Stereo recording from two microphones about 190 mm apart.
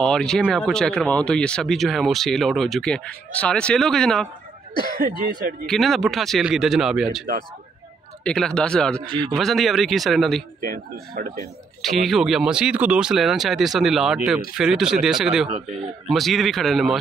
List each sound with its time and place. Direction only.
0.0 s speech: 5° left (ahead or behind)
5.7 s speech: centre (ahead or behind)
10.7 s a man's voice: 50° right (ahead or behind)
11.8 s speech: centre (ahead or behind)